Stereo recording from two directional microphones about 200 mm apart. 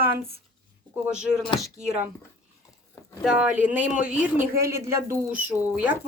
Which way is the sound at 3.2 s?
5° right (ahead or behind).